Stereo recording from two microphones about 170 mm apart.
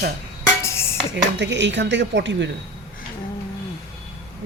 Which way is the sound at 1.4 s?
90° right.